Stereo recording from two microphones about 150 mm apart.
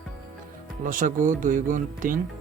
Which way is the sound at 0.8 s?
65° right (ahead or behind).